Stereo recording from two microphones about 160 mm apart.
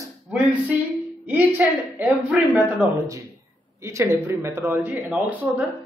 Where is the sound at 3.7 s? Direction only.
15° right (ahead or behind).